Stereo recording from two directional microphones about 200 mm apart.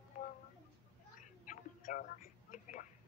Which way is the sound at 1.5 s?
40° left (ahead or behind).